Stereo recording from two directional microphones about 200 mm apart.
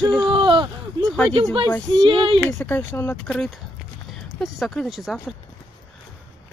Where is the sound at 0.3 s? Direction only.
25° right (ahead or behind).